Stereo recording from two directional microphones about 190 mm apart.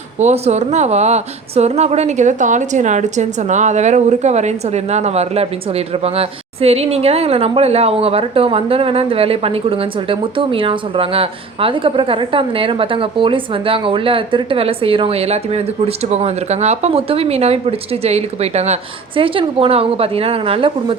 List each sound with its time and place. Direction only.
0.2 s a woman's voice: 35° right (ahead or behind)